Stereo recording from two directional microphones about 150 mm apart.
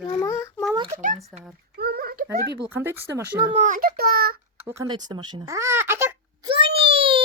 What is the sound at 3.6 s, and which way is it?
Speech, 60° right (ahead or behind).